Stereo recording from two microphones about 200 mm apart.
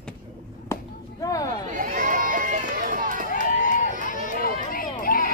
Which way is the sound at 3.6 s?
40° left (ahead or behind).